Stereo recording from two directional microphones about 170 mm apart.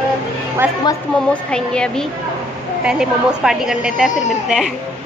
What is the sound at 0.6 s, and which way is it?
Speech, 5° right (ahead or behind).